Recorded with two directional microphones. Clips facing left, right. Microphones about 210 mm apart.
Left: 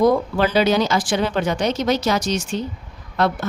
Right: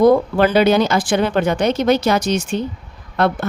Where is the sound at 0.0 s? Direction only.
55° right (ahead or behind).